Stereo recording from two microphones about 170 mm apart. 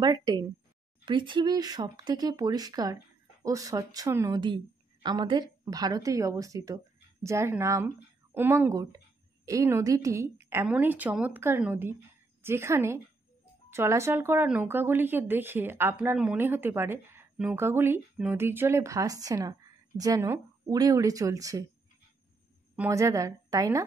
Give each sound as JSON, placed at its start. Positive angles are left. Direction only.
{"t": 0.0, "sound": "a woman's voice", "side_deg": -25}
{"t": 22.8, "sound": "speech", "side_deg": -15}